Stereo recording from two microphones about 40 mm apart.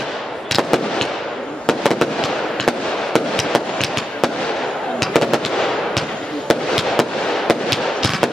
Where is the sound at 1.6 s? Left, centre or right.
Centre.